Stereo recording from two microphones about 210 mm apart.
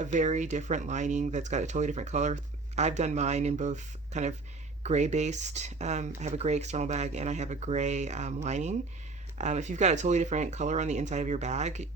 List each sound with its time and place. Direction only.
0.0 s speech: 35° right (ahead or behind)